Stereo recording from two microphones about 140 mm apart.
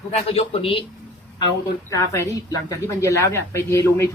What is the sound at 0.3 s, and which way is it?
Speech, 40° left (ahead or behind).